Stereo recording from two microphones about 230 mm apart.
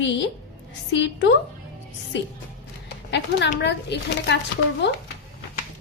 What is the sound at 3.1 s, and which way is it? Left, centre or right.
A woman's voice, left.